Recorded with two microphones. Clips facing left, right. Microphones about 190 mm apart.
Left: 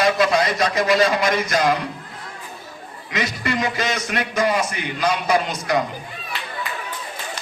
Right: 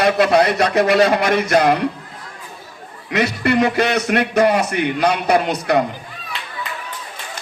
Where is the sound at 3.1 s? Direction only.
60° right (ahead or behind).